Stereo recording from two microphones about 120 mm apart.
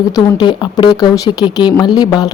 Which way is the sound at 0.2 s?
40° left (ahead or behind).